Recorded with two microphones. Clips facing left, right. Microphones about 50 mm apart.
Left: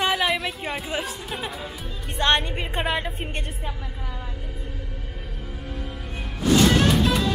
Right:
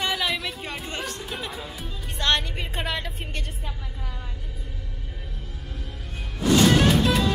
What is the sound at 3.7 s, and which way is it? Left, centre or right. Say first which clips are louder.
Vehicle: left 3 dB; centre.